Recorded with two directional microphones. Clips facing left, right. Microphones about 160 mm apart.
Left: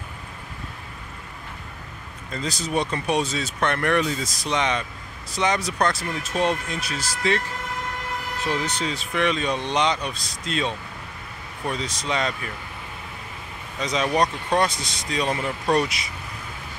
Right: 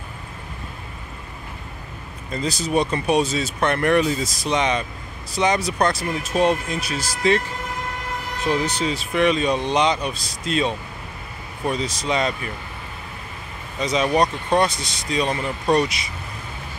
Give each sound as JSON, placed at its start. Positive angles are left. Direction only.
{"t": 2.3, "sound": "speech", "side_deg": -10}
{"t": 8.5, "sound": "speech", "side_deg": -10}
{"t": 13.7, "sound": "speech", "side_deg": -5}